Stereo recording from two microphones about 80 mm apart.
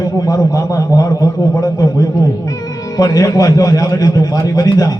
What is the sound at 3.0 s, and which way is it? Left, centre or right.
A man's voice, left.